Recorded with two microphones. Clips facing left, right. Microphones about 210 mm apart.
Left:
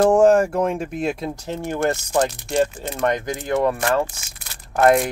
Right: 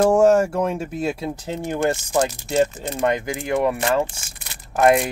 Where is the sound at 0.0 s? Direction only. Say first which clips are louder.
Left 1 dB; 10° right (ahead or behind).